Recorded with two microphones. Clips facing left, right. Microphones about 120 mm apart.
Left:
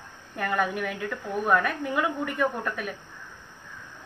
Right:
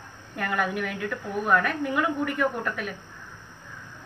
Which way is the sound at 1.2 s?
Centre (ahead or behind).